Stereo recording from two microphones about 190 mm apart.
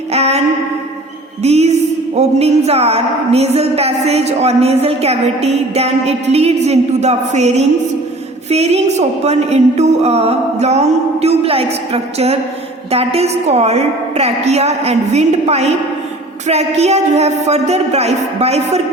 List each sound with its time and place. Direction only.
0.1 s music: 35° right (ahead or behind)